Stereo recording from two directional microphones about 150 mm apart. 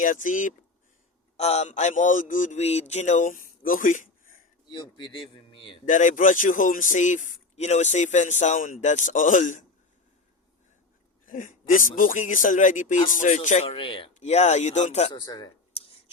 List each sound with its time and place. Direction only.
0.0 s a man's voice: 60° left (ahead or behind)
1.4 s a man's voice: 45° left (ahead or behind); by 4.4 s 60° left (ahead or behind)
4.7 s speech: 30° left (ahead or behind)
5.8 s a man's voice: 60° left (ahead or behind)
11.3 s a man's voice: 65° left (ahead or behind)
13.7 s speech: 35° left (ahead or behind)
15.1 s speech: 30° left (ahead or behind)
15.7 s a sound: 40° left (ahead or behind)